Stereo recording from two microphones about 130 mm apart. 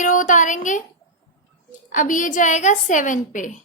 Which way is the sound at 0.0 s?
80° left.